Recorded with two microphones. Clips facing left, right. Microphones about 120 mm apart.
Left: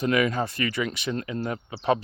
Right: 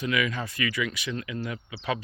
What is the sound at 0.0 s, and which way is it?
Speech, 40° left (ahead or behind).